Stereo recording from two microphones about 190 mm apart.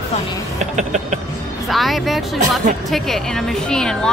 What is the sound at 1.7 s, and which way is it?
A woman's voice, centre (ahead or behind).